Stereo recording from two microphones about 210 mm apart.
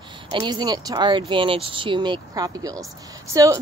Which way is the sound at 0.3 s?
20° right (ahead or behind).